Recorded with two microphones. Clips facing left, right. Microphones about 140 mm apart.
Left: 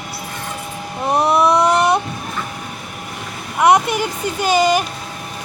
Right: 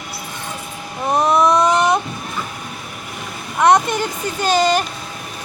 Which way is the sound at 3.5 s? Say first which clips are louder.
Even; 10° left (ahead or behind).